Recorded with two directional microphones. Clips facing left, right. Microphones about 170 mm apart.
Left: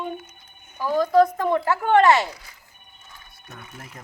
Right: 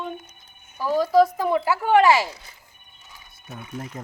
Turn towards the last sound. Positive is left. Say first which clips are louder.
# right 5 dB
turn(degrees=0)  # may be behind; listen again after turning